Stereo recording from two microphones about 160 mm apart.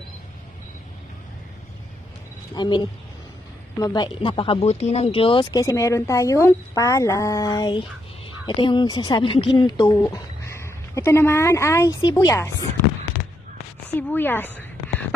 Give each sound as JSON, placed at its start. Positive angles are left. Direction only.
{"t": 2.5, "sound": "speech", "side_deg": 25}
{"t": 3.8, "sound": "speech", "side_deg": 25}
{"t": 13.8, "sound": "a sound", "side_deg": 10}